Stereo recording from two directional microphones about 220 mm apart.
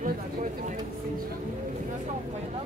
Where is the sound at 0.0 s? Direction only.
35° right (ahead or behind).